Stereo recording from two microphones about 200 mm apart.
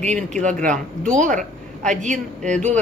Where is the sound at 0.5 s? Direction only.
5° left (ahead or behind).